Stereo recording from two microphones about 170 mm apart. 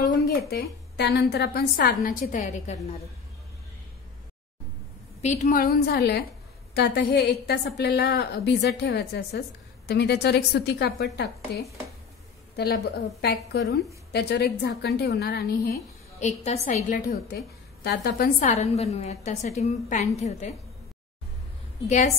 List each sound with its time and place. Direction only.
0.0 s a woman's voice: 70° left (ahead or behind); by 3.0 s 40° left (ahead or behind)
5.2 s a woman's voice: 45° left (ahead or behind); by 11.6 s 80° left
12.5 s a woman's voice: 65° left (ahead or behind)
16.2 s a woman's voice: 40° left (ahead or behind)
17.8 s a woman's voice: 75° left (ahead or behind)
18.4 s a woman's voice: 40° left (ahead or behind)
21.8 s a woman's voice: 45° left (ahead or behind)